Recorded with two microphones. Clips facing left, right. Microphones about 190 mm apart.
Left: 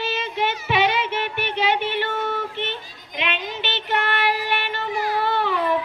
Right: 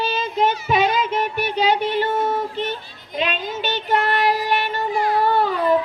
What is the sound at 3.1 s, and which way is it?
Child singing, 40° right (ahead or behind).